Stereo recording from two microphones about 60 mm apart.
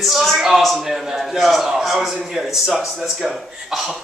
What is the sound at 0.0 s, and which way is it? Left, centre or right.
A man's voice, centre.